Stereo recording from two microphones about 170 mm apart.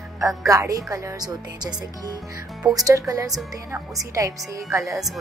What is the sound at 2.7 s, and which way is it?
Speech, 20° right (ahead or behind).